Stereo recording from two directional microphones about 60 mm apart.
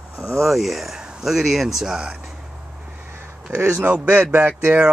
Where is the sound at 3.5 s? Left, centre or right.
Right.